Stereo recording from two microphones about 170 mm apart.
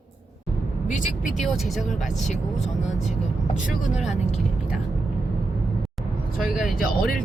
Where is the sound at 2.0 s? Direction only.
45° left (ahead or behind).